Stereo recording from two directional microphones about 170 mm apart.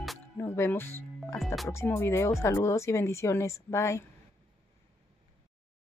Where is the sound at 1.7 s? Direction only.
15° left (ahead or behind).